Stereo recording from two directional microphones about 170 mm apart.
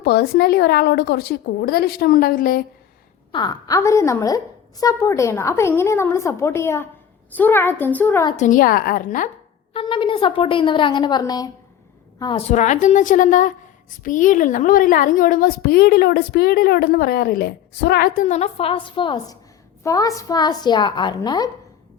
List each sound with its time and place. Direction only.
0.0 s a woman's voice: 70° left (ahead or behind)
3.3 s a woman's voice: 25° left (ahead or behind)
8.4 s a woman's voice: 50° left (ahead or behind)
9.7 s a woman's voice: 30° left (ahead or behind)
12.2 s a woman's voice: 35° left (ahead or behind)